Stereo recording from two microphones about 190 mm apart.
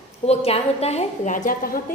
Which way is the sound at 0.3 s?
30° left (ahead or behind).